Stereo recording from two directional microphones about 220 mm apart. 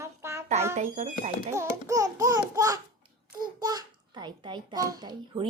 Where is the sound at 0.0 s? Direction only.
10° right (ahead or behind).